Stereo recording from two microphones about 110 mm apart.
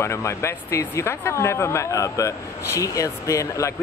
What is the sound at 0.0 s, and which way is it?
Speech, 25° left (ahead or behind).